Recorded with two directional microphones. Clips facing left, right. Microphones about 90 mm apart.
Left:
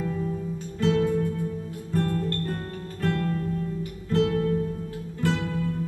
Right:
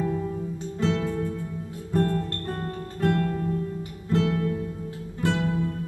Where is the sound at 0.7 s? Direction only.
25° right (ahead or behind).